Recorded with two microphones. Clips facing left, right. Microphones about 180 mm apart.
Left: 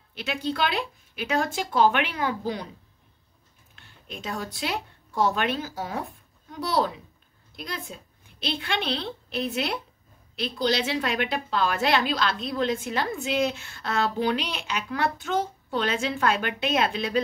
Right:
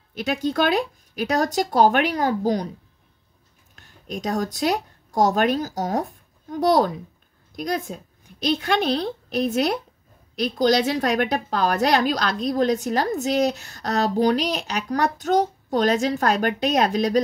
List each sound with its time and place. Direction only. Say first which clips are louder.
0.1 s a woman's voice: right 6 dB; 45° right (ahead or behind)
3.7 s a woman's voice: right 9 dB; 45° right (ahead or behind)